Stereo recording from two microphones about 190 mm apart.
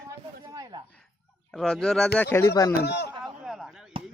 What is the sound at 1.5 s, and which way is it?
Speech, 5° left (ahead or behind).